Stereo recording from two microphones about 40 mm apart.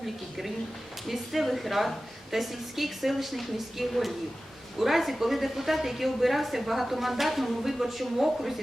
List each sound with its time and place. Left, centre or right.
1.0 s a woman's voice: centre